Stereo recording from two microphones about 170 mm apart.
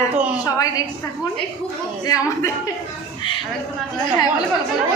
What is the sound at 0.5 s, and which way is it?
Speech, 20° left (ahead or behind).